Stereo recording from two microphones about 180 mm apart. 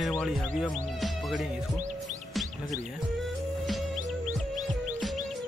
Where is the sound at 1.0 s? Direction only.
Centre (ahead or behind).